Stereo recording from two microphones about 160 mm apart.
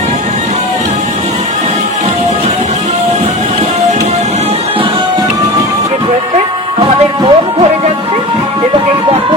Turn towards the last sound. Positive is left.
turn(degrees=-30)  # may be behind; listen again after turning